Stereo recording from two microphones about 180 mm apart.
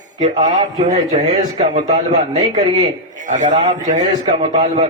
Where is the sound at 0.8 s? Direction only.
40° right (ahead or behind).